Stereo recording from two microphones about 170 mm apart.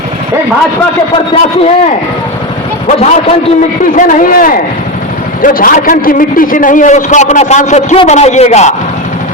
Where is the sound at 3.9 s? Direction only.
50° left (ahead or behind).